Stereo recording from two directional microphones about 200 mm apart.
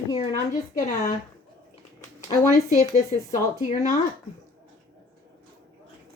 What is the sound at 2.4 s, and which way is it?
Speech, 40° left (ahead or behind).